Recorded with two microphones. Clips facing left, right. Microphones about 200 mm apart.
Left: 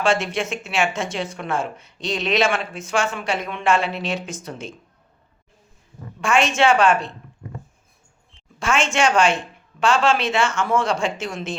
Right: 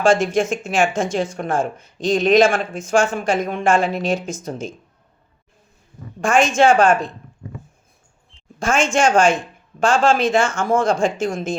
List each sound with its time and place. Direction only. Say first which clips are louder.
0.0 s speech: right 5 dB; 45° right (ahead or behind)
6.1 s speech: right 3 dB; 45° right (ahead or behind)
8.5 s speech: right 3 dB; 45° right (ahead or behind)